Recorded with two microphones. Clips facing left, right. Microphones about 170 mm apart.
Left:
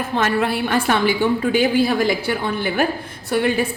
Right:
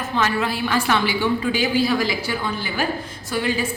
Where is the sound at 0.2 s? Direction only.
55° left (ahead or behind).